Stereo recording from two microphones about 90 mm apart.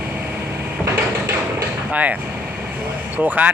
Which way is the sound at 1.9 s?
15° right (ahead or behind).